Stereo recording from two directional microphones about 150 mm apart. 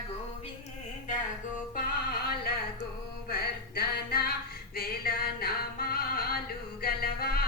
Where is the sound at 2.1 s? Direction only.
90° left.